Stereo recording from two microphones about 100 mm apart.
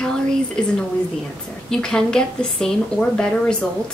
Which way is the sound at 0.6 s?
5° left (ahead or behind).